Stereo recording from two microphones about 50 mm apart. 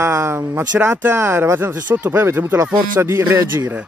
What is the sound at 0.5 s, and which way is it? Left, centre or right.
Speech, right.